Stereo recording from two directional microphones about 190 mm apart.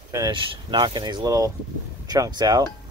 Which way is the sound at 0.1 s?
20° right (ahead or behind).